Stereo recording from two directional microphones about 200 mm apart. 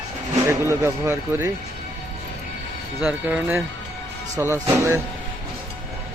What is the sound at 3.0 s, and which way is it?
Speech, 10° right (ahead or behind).